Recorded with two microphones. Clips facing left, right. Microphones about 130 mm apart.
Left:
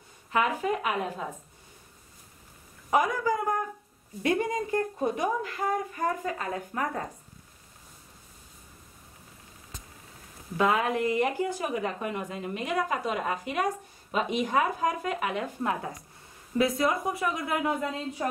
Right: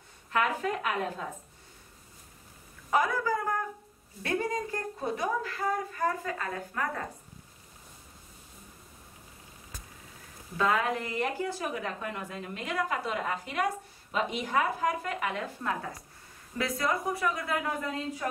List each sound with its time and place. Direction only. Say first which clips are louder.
0.3 s a woman's voice: left 2 dB; 10° left (ahead or behind)
2.9 s a man's voice: left 2 dB; 15° left (ahead or behind)
10.6 s a woman's voice: left 3 dB; 20° left (ahead or behind)